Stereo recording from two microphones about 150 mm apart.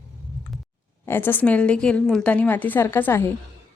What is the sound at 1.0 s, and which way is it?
Speech, 15° left (ahead or behind).